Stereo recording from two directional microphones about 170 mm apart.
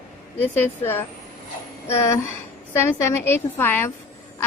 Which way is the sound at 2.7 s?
15° left (ahead or behind).